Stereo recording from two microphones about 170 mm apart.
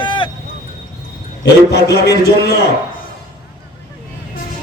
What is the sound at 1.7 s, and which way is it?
Speech, 70° left (ahead or behind).